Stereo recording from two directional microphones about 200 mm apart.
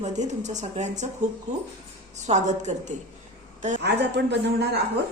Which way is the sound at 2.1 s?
35° right (ahead or behind).